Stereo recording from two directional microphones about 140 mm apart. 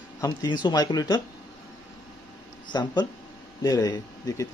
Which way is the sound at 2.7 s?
25° left (ahead or behind).